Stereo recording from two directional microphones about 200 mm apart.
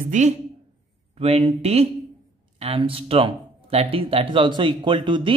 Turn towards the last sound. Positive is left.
turn(degrees=-25)  # may be behind; listen again after turning